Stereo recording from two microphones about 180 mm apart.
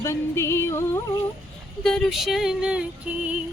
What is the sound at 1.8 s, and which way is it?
Speech, centre (ahead or behind).